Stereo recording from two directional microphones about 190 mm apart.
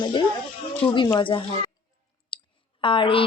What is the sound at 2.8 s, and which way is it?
Speech, 25° left (ahead or behind).